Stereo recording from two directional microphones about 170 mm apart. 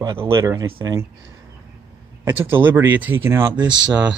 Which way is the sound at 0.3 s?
15° right (ahead or behind).